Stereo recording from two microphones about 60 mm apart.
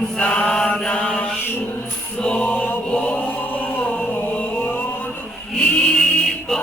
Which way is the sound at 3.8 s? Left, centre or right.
Left.